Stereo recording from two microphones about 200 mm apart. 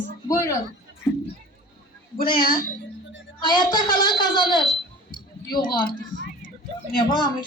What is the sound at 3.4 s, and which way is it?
A woman's voice, 20° left (ahead or behind).